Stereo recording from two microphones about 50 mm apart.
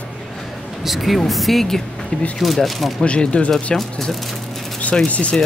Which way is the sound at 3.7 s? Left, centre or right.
Centre.